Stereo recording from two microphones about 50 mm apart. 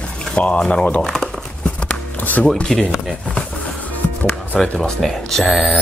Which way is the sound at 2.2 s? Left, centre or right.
Left.